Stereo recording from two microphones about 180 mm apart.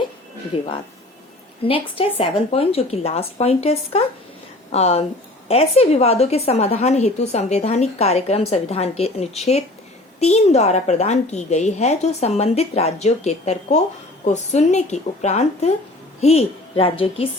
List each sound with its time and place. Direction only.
1.6 s a woman's voice: 30° left (ahead or behind)